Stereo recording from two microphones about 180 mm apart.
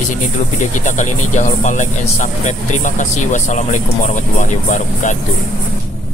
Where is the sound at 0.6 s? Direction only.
45° left (ahead or behind).